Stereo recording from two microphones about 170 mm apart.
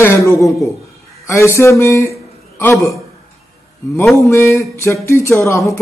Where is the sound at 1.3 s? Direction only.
15° left (ahead or behind).